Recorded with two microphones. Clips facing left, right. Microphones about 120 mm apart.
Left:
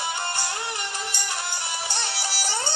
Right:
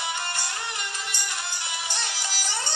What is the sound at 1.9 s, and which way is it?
Music, 30° left (ahead or behind).